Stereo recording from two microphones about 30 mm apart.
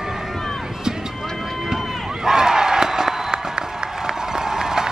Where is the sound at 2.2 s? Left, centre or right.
Centre.